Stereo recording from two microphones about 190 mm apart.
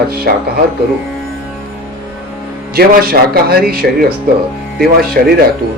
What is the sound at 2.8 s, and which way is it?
Speech, 55° right (ahead or behind).